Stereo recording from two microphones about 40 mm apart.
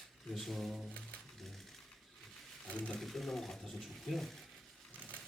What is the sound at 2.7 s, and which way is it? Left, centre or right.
Speech, left.